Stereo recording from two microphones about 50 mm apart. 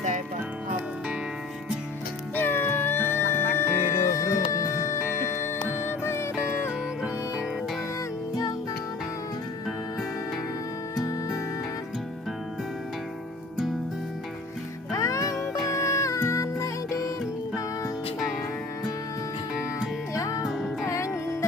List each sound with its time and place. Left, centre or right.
2.3 s music: left
5.8 s music: left
10.9 s music: left
14.9 s music: left
20.4 s music: centre
20.8 s music: left